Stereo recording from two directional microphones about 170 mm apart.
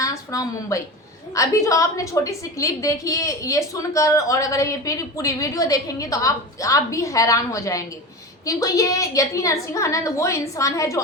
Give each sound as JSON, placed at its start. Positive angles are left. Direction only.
{"t": 0.0, "sound": "a woman's voice", "side_deg": 20}